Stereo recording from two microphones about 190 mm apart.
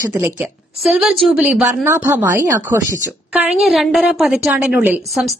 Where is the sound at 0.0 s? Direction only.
10° right (ahead or behind).